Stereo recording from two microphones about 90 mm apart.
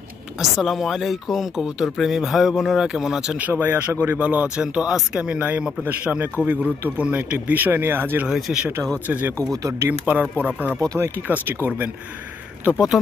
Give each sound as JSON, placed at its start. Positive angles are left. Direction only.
{"t": 0.4, "sound": "speech", "side_deg": 0}
{"t": 8.3, "sound": "speech", "side_deg": -5}
{"t": 9.0, "sound": "speech", "side_deg": -20}
{"t": 9.5, "sound": "speech", "side_deg": -35}
{"t": 9.8, "sound": "speech", "side_deg": -20}
{"t": 12.7, "sound": "speech", "side_deg": -5}